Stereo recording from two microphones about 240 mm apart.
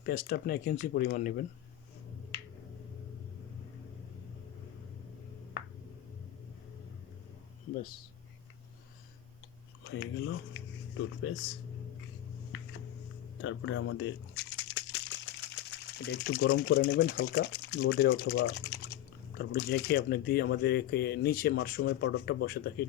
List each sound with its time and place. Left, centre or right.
0.0 s speech: left
9.8 s speech: left
13.4 s crumpling: left
16.4 s speech: left